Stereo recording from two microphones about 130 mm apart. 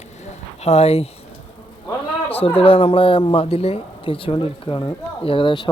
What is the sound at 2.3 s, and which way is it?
Speech, 45° left (ahead or behind).